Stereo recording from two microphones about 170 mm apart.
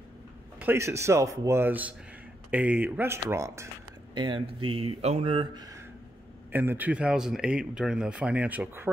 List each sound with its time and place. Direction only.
0.6 s speech: 15° right (ahead or behind)